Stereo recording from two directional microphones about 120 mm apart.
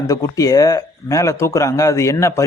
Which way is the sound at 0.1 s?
30° left (ahead or behind).